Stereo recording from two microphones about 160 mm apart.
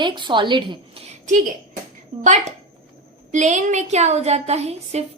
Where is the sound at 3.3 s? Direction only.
50° right (ahead or behind).